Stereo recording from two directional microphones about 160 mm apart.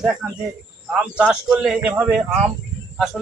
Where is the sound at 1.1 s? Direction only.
5° right (ahead or behind).